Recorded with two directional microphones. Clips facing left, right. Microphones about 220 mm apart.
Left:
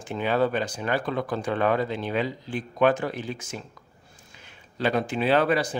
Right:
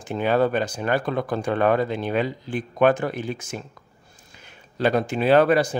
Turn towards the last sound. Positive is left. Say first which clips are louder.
# right 5 dB
turn(degrees=-50)  # may be behind; listen again after turning